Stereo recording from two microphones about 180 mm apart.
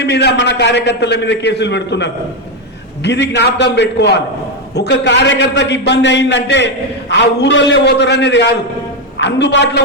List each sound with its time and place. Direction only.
0.0 s a man's voice: 65° left (ahead or behind)